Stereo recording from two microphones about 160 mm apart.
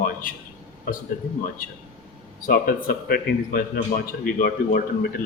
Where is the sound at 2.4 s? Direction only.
65° left (ahead or behind).